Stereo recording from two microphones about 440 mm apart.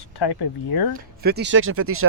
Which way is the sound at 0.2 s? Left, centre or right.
Left.